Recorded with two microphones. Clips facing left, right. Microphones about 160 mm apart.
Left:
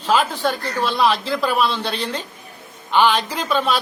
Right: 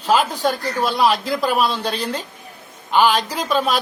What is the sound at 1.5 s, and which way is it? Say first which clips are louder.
Speech: right 1 dB; 40° right (ahead or behind).